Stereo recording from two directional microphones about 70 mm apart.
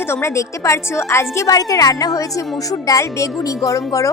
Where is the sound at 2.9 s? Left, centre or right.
Left.